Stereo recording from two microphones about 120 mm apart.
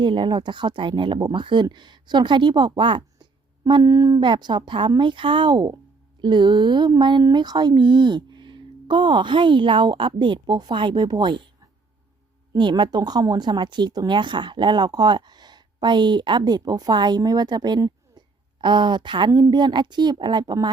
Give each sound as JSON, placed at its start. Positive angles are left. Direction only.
{"t": 0.0, "sound": "speech", "side_deg": -45}
{"t": 12.5, "sound": "speech", "side_deg": -40}